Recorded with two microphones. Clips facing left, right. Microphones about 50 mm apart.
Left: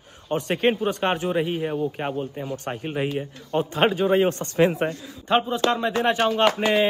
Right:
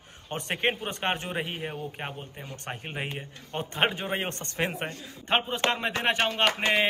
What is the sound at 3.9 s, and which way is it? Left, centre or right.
Speech, right.